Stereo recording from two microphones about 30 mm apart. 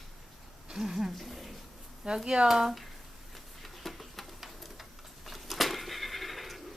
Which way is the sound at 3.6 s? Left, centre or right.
Centre.